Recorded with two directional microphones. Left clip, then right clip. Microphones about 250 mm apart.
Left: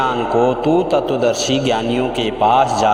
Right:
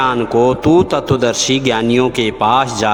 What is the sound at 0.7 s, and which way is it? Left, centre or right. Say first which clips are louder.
Speech: right 3 dB; right.